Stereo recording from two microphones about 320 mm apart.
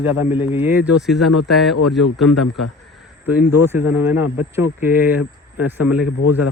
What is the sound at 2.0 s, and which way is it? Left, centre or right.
Speech, left.